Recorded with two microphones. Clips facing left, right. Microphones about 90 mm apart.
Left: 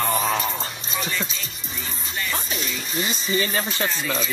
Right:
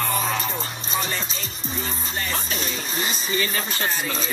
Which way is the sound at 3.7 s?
45° right (ahead or behind).